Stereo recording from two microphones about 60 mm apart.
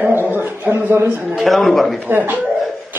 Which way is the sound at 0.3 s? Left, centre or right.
Right.